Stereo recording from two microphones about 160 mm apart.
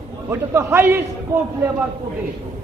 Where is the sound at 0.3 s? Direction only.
15° right (ahead or behind).